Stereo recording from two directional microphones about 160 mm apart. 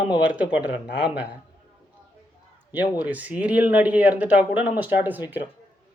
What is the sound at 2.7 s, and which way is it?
Speech, 10° right (ahead or behind).